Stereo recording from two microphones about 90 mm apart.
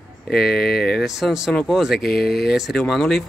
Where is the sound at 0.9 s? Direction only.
5° right (ahead or behind).